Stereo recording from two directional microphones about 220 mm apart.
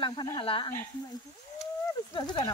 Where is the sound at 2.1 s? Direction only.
20° left (ahead or behind).